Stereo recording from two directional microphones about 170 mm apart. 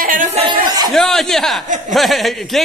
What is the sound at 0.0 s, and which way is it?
Chuckle, 50° right (ahead or behind).